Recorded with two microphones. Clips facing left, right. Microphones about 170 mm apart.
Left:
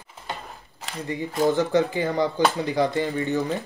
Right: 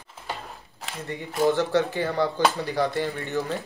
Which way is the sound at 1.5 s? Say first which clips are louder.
Left 3 dB; 15° left (ahead or behind).